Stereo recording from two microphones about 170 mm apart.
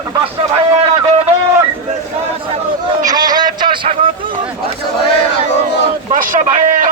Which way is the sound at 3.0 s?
25° right (ahead or behind).